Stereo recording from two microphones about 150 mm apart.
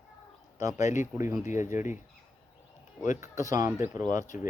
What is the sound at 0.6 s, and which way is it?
Speech, 20° right (ahead or behind).